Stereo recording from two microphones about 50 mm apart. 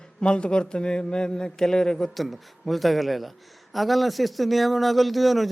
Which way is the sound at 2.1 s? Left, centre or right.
Centre.